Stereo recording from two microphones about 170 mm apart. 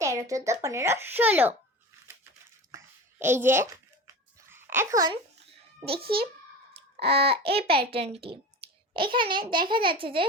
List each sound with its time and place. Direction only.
0.0 s a sound: 20° right (ahead or behind)
0.6 s a child's voice: 15° right (ahead or behind)
2.7 s a sound: 15° right (ahead or behind)
5.9 s a child's voice: 65° right (ahead or behind)
7.1 s babbling: 35° right (ahead or behind)
7.7 s a child's voice: 65° right (ahead or behind)
8.1 s babbling: 35° right (ahead or behind)
9.1 s a child's voice: 30° right (ahead or behind)
10.0 s babbling: 30° right (ahead or behind)